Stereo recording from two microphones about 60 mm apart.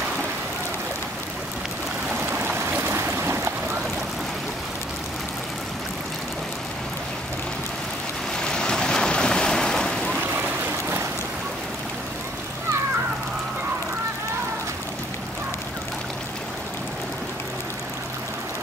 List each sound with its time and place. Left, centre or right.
2.3 s stream: right
8.4 s waves: centre